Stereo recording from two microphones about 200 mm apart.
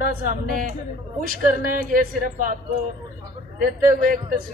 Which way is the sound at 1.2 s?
45° right (ahead or behind).